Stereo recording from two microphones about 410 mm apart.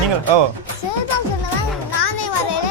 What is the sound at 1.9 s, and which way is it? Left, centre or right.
Children playing, left.